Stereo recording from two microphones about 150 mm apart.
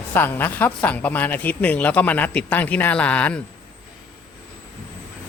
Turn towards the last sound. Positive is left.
turn(degrees=10)  # may be behind; listen again after turning